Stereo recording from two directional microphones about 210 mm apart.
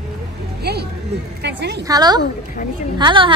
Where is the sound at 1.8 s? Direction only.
20° right (ahead or behind).